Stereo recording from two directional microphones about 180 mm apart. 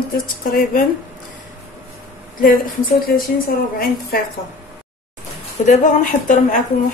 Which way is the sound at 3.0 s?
55° left (ahead or behind).